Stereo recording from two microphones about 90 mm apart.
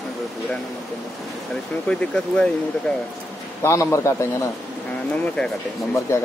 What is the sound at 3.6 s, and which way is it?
Speech, 35° left (ahead or behind).